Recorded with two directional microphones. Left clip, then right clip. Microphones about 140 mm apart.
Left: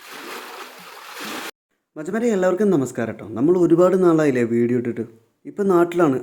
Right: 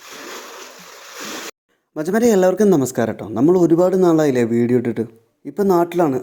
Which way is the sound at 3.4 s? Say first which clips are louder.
Right 2 dB; 25° right (ahead or behind).